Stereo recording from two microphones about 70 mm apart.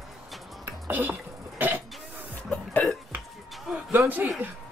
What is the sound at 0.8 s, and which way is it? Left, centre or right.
Speech, right.